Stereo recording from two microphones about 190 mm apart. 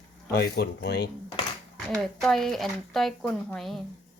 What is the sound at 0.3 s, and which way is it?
Speech, 55° left (ahead or behind).